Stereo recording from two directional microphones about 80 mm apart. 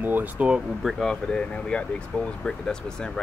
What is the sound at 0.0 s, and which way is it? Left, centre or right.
Speech, right.